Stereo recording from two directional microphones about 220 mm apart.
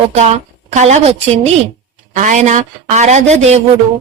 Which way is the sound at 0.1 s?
30° right (ahead or behind).